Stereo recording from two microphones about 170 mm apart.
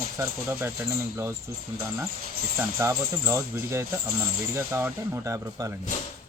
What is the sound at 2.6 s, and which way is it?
Speech, 15° right (ahead or behind).